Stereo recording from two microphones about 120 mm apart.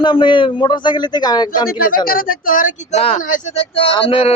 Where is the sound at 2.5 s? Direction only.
85° left; by 4.3 s 50° left (ahead or behind).